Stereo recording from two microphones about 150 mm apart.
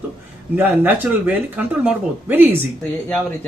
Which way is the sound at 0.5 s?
10° right (ahead or behind).